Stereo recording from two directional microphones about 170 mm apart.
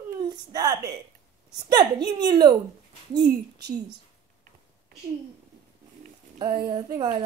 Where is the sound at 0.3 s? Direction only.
25° right (ahead or behind).